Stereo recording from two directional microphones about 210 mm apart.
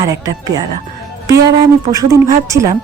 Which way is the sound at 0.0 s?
15° right (ahead or behind).